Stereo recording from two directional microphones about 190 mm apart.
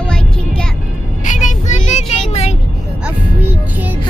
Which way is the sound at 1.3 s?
40° left (ahead or behind).